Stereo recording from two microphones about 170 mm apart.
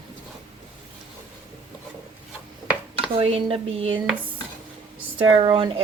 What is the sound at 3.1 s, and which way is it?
Speech, 35° right (ahead or behind).